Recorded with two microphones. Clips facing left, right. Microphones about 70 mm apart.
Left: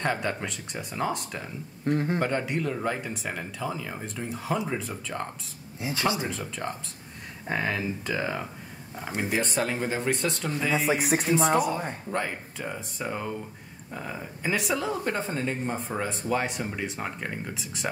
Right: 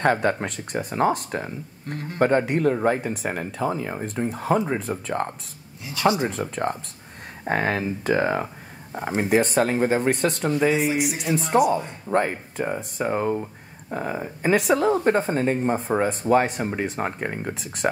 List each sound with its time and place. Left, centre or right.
0.0 s speech: right
1.9 s speech: left
2.1 s speech: right
5.8 s speech: left
6.0 s speech: right
6.3 s speech: right
10.9 s speech: left
12.1 s speech: right